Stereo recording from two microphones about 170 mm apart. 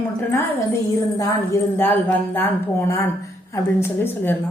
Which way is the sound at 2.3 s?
10° left (ahead or behind).